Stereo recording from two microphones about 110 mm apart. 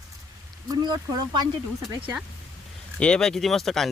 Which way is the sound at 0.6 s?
35° right (ahead or behind).